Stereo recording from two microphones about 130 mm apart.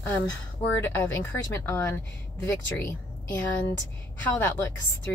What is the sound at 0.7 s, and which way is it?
A woman's voice, 15° left (ahead or behind).